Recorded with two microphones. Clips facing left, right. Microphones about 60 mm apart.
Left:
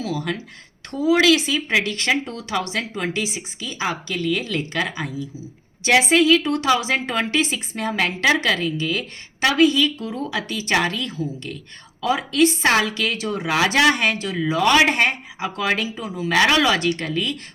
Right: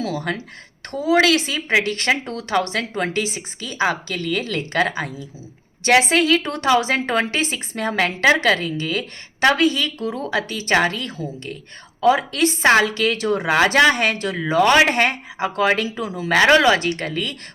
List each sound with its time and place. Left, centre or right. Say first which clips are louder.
0.0 s a woman's voice: right 1 dB; right
13.5 s a woman's voice: right 2 dB; right
16.0 s speech: right 3 dB; right
16.3 s a woman's voice: right 3 dB; right